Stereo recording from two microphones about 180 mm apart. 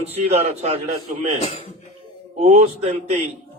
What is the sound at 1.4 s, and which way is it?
Speech, 35° left (ahead or behind).